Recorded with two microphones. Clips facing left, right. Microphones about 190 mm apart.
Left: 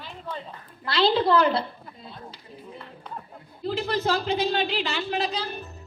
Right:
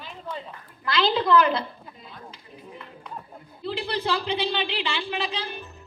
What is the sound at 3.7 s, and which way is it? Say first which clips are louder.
A woman's voice: left 2 dB; 45° left (ahead or behind).